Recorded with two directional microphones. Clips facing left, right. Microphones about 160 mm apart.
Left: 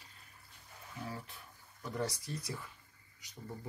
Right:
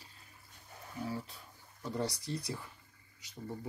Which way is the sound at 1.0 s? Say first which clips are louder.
Right 5 dB; 25° right (ahead or behind).